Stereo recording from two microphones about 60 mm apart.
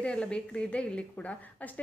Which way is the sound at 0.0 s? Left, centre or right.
Centre.